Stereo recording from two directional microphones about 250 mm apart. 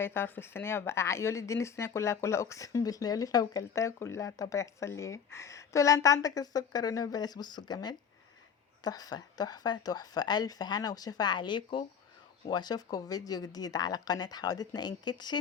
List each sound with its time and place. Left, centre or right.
0.0 s speech: centre